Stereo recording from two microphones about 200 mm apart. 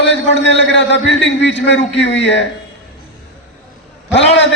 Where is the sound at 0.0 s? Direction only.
60° left (ahead or behind).